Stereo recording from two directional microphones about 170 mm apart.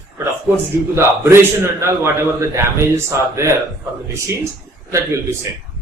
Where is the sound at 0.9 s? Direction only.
15° right (ahead or behind).